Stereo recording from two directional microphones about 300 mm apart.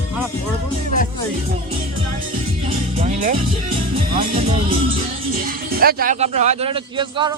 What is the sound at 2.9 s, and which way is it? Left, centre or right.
Speech, right.